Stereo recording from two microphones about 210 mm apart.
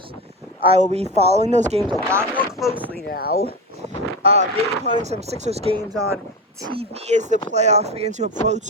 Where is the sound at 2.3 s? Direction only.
Centre (ahead or behind).